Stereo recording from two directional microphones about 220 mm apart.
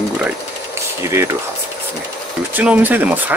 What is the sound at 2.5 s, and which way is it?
Speech, 5° right (ahead or behind).